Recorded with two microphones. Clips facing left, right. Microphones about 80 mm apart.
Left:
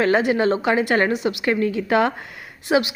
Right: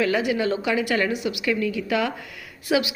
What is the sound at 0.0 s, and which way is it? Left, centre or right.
A woman's voice, left.